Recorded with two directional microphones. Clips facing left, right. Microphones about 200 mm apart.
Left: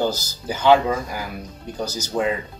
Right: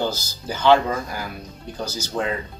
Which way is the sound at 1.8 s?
40° left (ahead or behind).